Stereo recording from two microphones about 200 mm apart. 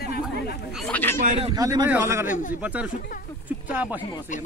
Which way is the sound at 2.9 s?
45° left (ahead or behind).